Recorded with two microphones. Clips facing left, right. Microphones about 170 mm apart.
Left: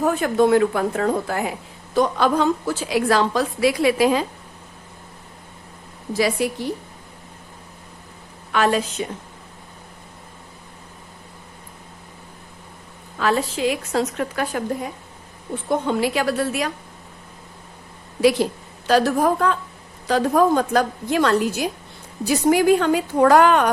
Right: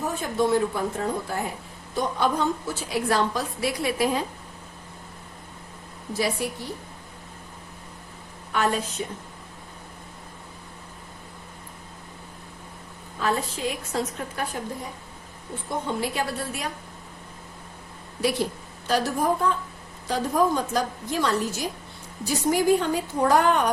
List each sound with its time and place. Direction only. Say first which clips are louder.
0.0 s a woman's voice: left 7 dB; 70° left (ahead or behind); by 4.3 s 90° left
6.1 s a woman's voice: left 6 dB; 90° left
8.5 s a woman's voice: left 5 dB; 90° left
13.1 s a woman's voice: left 5 dB; 90° left
15.9 s a woman's voice: left 5 dB; 90° left
18.2 s a woman's voice: left 8 dB; 90° left
20.5 s a woman's voice: left 6 dB; 65° left (ahead or behind); by 23.7 s 90° left